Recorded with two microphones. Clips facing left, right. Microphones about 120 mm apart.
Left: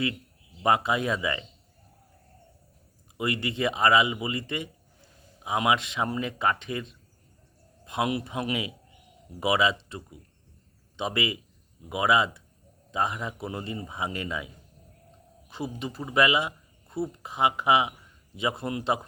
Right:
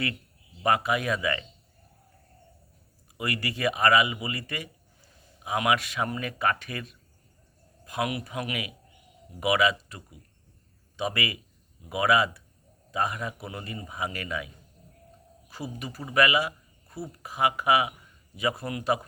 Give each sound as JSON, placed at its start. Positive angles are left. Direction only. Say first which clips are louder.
{"t": 0.6, "sound": "a man's voice", "louder": "left 1 dB", "side_deg": 25}
{"t": 3.2, "sound": "a man's voice", "louder": "left 3 dB", "side_deg": 20}